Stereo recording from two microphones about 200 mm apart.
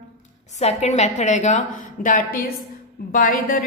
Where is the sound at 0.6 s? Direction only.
35° left (ahead or behind).